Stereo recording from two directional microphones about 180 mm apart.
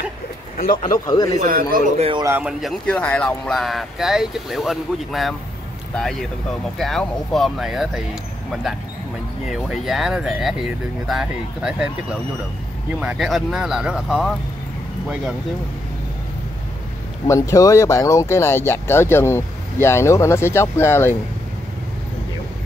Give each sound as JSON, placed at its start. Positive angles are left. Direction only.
{"t": 0.6, "sound": "speech", "side_deg": 50}
{"t": 1.0, "sound": "speech", "side_deg": 20}
{"t": 1.4, "sound": "speech", "side_deg": -50}
{"t": 2.0, "sound": "a man's voice", "side_deg": -30}
{"t": 2.2, "sound": "a man's voice", "side_deg": -10}
{"t": 2.6, "sound": "speech", "side_deg": 5}
{"t": 6.8, "sound": "speech", "side_deg": 0}
{"t": 17.3, "sound": "speech", "side_deg": 15}